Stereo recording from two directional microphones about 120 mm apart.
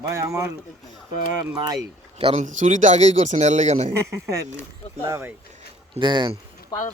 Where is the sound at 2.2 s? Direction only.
50° right (ahead or behind).